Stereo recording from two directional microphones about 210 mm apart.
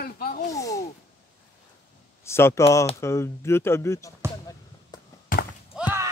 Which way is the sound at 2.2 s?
10° left (ahead or behind).